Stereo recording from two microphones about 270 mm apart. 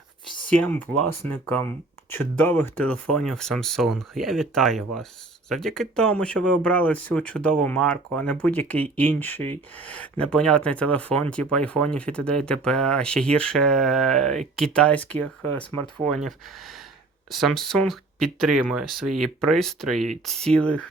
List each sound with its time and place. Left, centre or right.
0.6 s speech: centre